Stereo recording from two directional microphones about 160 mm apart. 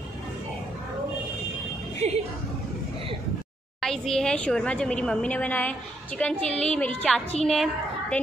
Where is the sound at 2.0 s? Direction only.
45° right (ahead or behind).